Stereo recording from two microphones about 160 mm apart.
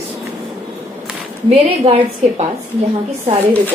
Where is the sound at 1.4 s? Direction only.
40° right (ahead or behind).